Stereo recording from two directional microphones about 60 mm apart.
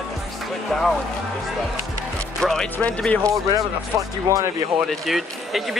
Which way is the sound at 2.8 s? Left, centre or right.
Left.